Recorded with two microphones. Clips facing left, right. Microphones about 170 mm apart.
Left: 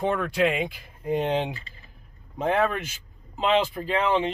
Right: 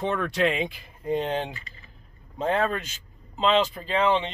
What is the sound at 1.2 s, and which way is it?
Speech, 15° left (ahead or behind).